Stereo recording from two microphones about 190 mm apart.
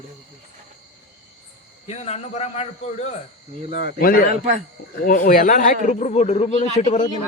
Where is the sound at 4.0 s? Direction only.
50° left (ahead or behind).